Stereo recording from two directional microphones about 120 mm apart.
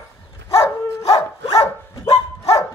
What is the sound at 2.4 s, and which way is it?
Dog, 30° left (ahead or behind).